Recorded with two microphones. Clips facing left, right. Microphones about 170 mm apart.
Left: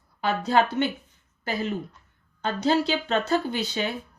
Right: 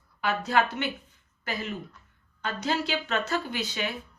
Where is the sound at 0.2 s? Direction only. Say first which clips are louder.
Left 3 dB; 30° left (ahead or behind).